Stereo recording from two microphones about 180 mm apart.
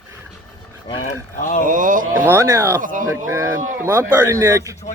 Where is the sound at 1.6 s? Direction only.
45° right (ahead or behind).